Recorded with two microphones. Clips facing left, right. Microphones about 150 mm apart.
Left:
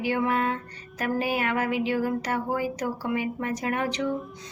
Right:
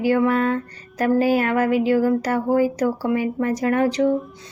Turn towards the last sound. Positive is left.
turn(degrees=-40)  # may be behind; listen again after turning